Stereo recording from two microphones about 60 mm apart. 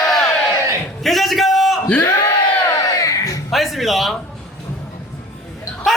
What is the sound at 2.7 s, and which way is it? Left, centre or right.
Crowd, left.